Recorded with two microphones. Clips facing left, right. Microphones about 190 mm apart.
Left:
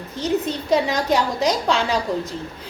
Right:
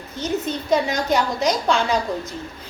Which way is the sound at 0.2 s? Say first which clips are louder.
Left 2 dB; 30° left (ahead or behind).